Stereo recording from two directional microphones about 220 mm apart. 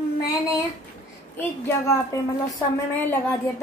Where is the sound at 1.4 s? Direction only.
10° left (ahead or behind).